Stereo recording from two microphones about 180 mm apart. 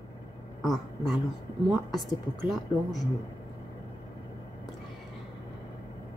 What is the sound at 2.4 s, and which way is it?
Speech, centre (ahead or behind).